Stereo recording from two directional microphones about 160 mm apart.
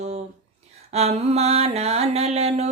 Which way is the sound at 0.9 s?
40° right (ahead or behind).